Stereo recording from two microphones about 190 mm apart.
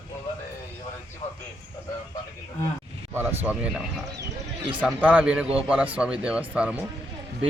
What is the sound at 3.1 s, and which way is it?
Speech, 5° right (ahead or behind).